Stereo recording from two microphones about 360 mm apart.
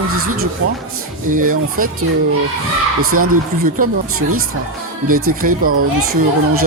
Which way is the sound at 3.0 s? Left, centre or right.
Right.